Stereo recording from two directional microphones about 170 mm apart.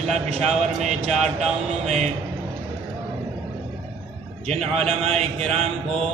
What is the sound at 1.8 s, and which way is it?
Speech, 40° right (ahead or behind).